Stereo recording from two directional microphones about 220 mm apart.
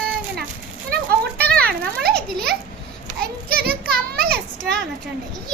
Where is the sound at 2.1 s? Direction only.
5° left (ahead or behind).